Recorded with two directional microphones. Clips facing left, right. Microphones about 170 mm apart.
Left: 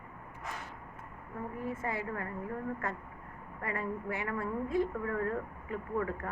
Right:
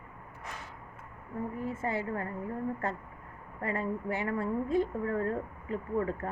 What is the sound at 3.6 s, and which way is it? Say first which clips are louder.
A woman's voice: right 3 dB; 25° right (ahead or behind).